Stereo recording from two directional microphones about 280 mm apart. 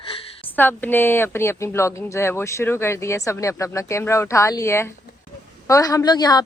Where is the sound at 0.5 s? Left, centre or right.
Centre.